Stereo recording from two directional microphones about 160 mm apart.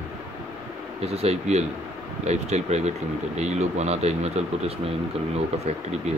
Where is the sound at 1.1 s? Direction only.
40° right (ahead or behind).